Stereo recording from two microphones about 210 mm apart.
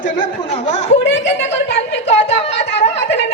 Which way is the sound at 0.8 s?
55° left (ahead or behind).